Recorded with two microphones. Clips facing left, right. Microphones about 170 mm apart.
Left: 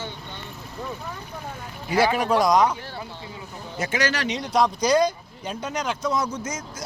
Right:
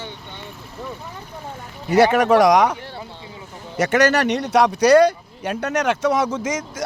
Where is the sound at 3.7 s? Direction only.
75° right (ahead or behind).